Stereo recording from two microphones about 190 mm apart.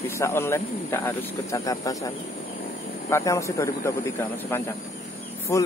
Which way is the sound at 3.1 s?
15° left (ahead or behind).